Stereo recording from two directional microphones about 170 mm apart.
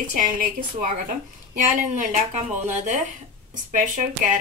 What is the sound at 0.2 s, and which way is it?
Speech, 50° right (ahead or behind).